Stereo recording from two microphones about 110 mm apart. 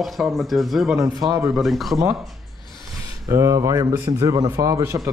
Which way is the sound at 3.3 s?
30° right (ahead or behind).